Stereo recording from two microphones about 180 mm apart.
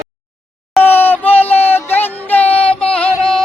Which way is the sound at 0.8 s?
10° left (ahead or behind).